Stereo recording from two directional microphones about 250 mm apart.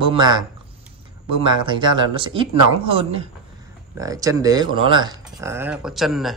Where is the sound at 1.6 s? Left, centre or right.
Centre.